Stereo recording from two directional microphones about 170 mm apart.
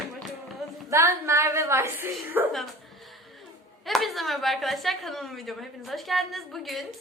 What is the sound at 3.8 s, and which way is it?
A woman's voice, centre (ahead or behind).